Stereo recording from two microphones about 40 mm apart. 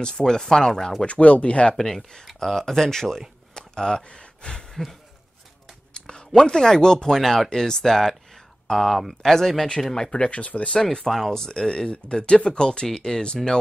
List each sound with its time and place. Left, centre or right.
0.0 s speech: centre
1.0 s speech: left
1.8 s speech: centre
2.2 s speech: centre
2.6 s speech: centre
3.5 s a sound: centre
4.0 s gasp: left
5.9 s speech: centre
10.9 s speech: centre